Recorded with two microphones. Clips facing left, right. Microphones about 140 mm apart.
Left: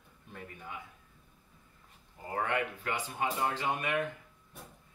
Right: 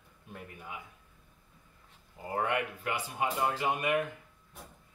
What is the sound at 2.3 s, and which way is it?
Speech, 10° right (ahead or behind).